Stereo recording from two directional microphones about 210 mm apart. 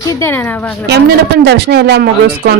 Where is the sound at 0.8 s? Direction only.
50° right (ahead or behind).